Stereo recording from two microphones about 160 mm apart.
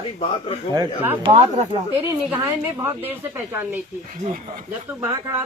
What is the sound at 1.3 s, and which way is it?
Speech, 45° right (ahead or behind).